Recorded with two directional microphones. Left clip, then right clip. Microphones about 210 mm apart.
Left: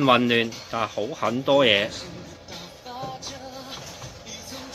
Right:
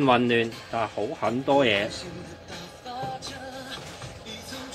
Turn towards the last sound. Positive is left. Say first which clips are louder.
# right 1 dB
turn(degrees=0)  # may be behind; listen again after turning